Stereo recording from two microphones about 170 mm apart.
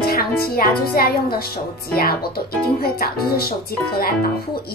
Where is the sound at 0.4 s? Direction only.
65° left (ahead or behind).